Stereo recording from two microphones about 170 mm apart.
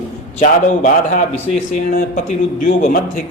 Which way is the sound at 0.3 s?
50° left (ahead or behind).